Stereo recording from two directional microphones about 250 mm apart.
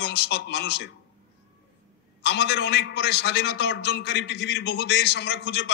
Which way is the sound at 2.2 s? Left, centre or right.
Left.